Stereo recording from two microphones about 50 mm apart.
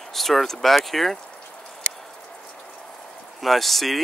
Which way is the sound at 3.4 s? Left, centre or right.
Centre.